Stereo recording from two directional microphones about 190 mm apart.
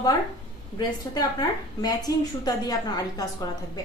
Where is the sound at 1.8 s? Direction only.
20° left (ahead or behind).